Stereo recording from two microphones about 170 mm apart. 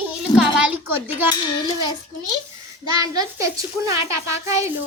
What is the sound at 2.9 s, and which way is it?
A child's voice, 20° right (ahead or behind).